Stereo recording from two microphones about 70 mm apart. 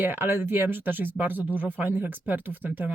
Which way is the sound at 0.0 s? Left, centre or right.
Right.